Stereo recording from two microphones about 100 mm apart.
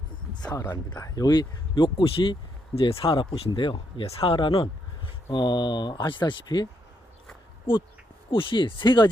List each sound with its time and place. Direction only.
0.3 s a sound: 45° left (ahead or behind)
0.7 s speech: 45° left (ahead or behind); by 4.7 s 60° left (ahead or behind)
5.3 s speech: 50° left (ahead or behind)
8.3 s speech: 60° left (ahead or behind)